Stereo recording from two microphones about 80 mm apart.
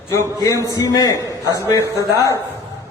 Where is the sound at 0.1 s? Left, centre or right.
Left.